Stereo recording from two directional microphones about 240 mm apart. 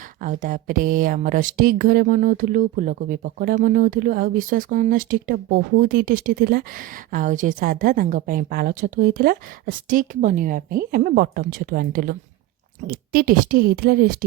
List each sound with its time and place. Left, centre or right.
0.2 s a woman's voice: right